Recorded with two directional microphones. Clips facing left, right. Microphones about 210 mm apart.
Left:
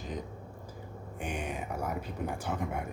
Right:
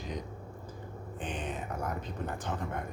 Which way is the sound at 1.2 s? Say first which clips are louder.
Left 1 dB; 10° left (ahead or behind).